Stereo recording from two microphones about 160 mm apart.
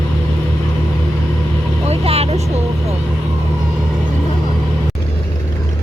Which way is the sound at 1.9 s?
40° right (ahead or behind).